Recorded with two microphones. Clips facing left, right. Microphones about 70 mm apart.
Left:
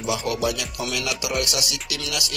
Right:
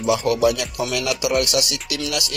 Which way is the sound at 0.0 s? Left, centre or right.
Right.